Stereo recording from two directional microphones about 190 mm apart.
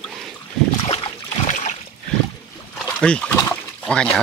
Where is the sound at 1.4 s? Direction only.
40° left (ahead or behind).